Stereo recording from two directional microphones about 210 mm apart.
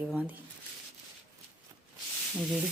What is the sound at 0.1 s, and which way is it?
Speech, 5° right (ahead or behind).